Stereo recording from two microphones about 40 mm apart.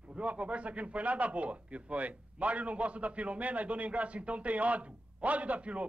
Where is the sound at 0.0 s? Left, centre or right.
Right.